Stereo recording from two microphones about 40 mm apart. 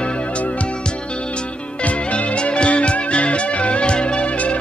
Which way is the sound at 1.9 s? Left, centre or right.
Left.